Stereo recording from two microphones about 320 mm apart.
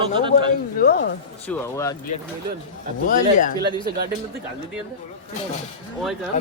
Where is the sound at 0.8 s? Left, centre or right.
Left.